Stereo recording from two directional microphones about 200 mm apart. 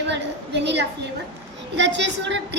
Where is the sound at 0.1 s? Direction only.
60° right (ahead or behind).